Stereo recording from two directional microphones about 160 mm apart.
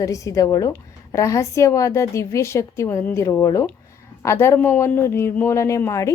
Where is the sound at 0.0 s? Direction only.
20° left (ahead or behind).